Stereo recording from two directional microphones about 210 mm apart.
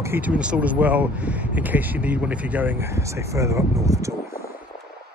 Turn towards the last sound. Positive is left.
turn(degrees=-15)  # may be behind; listen again after turning